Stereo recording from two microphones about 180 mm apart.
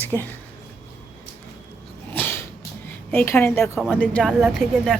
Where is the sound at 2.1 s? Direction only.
10° left (ahead or behind).